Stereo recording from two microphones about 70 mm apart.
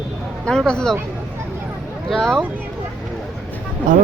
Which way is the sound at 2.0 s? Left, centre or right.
Centre.